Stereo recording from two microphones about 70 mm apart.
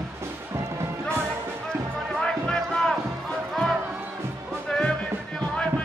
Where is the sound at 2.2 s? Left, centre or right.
Centre.